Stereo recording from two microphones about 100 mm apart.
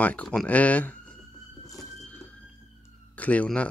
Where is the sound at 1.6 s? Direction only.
35° left (ahead or behind).